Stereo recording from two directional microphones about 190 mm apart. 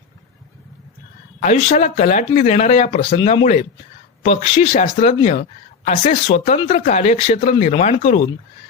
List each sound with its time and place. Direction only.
1.4 s speech: 35° left (ahead or behind)
3.2 s speech: 25° left (ahead or behind)
3.4 s speech: 40° left (ahead or behind)